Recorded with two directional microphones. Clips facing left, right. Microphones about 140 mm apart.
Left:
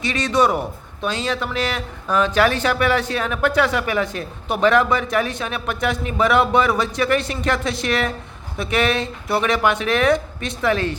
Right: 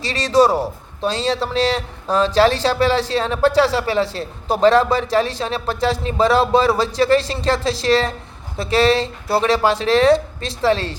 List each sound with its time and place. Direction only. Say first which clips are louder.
0.0 s a man's voice: right 3 dB; 35° right (ahead or behind)